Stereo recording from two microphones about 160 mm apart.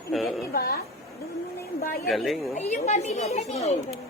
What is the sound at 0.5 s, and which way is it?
Speech, 75° left (ahead or behind).